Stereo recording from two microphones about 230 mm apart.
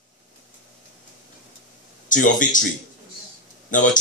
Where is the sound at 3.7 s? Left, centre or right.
Left.